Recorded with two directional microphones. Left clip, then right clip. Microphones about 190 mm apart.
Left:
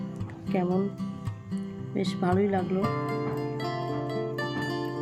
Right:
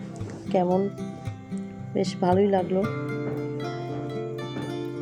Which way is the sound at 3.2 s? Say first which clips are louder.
Right 1 dB; 35° left (ahead or behind).